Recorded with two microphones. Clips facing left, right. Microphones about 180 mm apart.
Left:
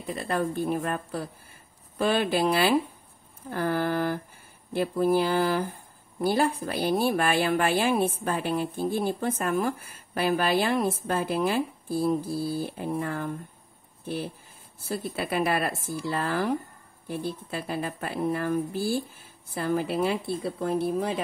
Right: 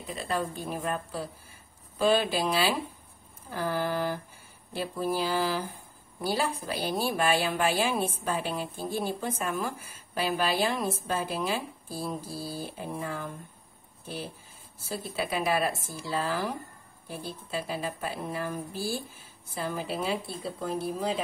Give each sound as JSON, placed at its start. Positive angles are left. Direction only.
{"t": 0.1, "sound": "a woman's voice", "side_deg": 60}
{"t": 14.9, "sound": "a woman's voice", "side_deg": 55}